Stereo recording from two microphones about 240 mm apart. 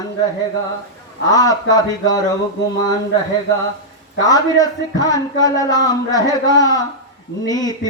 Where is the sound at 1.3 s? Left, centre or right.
Centre.